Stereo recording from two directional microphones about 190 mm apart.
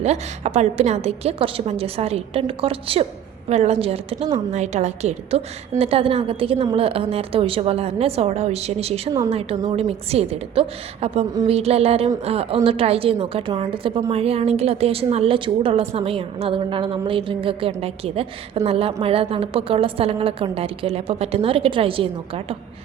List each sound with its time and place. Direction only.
0.0 s a woman's voice: 35° right (ahead or behind)